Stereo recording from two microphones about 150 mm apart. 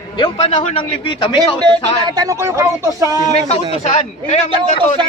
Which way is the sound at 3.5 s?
45° left (ahead or behind).